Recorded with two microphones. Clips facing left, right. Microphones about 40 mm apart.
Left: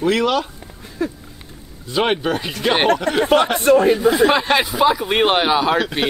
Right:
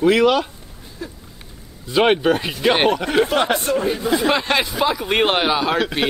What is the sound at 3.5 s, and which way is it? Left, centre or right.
Speech, left.